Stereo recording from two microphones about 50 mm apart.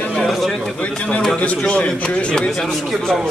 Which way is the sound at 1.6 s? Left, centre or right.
Left.